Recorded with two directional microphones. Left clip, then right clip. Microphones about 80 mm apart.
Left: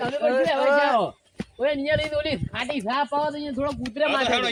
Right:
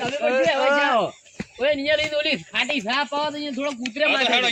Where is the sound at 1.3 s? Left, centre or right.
Right.